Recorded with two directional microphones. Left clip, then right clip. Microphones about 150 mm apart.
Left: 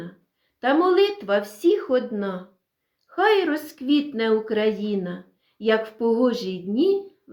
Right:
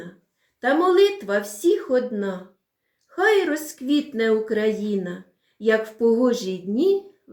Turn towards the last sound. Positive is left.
turn(degrees=25)  # may be behind; listen again after turning